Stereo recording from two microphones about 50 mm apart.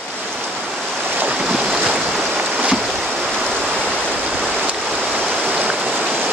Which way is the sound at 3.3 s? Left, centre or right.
Centre.